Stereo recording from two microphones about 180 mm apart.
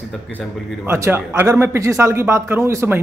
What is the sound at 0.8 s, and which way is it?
Speech, 15° right (ahead or behind).